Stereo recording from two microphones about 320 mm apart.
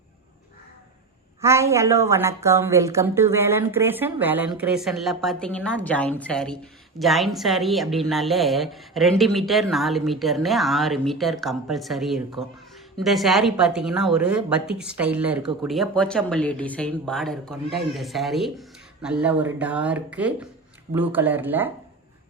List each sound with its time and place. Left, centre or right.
1.4 s a woman's voice: centre